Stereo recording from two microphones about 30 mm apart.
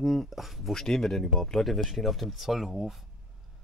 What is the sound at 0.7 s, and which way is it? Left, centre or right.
Speech, centre.